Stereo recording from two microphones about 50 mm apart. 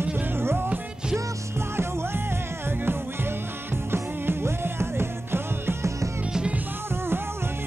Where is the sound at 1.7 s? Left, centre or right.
Right.